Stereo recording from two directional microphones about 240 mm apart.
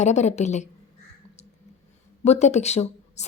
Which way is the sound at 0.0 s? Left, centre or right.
Left.